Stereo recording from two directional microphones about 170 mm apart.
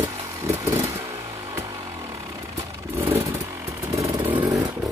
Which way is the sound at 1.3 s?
20° right (ahead or behind).